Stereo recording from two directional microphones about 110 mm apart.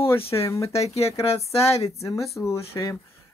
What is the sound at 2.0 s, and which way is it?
Speech, 30° left (ahead or behind).